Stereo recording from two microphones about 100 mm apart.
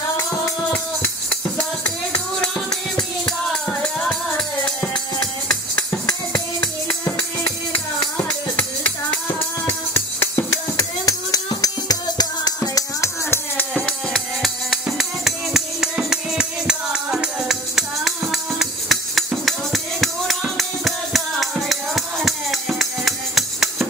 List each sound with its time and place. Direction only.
2.1 s music: 10° left (ahead or behind)
6.6 s music: 10° left (ahead or behind)
11.1 s music: 35° left (ahead or behind)
12.7 s music: 30° left (ahead or behind)
13.8 s music: centre (ahead or behind)